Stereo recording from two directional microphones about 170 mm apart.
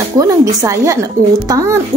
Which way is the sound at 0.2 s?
20° right (ahead or behind).